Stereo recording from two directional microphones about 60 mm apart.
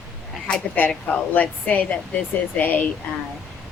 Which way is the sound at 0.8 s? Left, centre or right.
Left.